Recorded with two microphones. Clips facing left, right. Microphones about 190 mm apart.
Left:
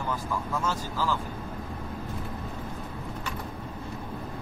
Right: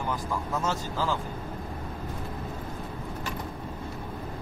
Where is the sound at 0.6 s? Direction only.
20° right (ahead or behind).